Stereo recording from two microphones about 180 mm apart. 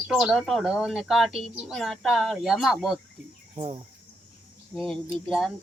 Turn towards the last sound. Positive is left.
turn(degrees=0)  # may be behind; listen again after turning